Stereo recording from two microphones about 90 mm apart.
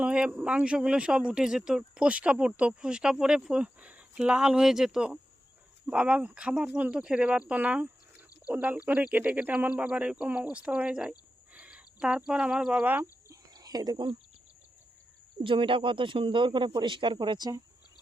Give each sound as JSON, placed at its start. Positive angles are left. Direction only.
{"t": 0.0, "sound": "speech", "side_deg": -10}
{"t": 13.2, "sound": "whispering", "side_deg": -40}
{"t": 15.4, "sound": "speech", "side_deg": -75}